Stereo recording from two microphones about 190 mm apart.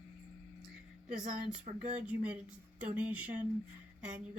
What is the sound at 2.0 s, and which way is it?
A woman's voice, 5° right (ahead or behind).